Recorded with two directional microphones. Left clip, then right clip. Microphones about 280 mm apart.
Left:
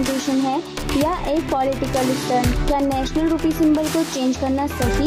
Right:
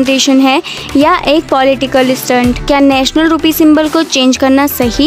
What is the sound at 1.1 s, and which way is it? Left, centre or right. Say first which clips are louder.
Speech: right 16 dB; right.